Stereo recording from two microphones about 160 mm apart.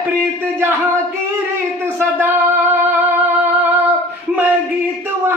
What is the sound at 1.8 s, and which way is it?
Music, 15° right (ahead or behind).